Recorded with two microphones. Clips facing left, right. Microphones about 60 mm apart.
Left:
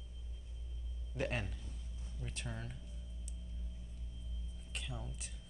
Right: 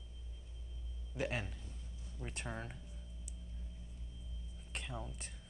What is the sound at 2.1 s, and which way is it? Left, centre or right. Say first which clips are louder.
Speech: right 2 dB; right.